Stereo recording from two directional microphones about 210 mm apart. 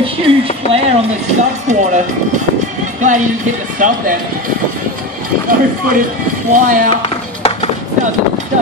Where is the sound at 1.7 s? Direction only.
35° right (ahead or behind).